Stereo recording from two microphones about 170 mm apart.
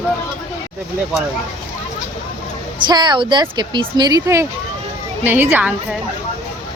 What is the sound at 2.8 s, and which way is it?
A woman's voice, 25° right (ahead or behind).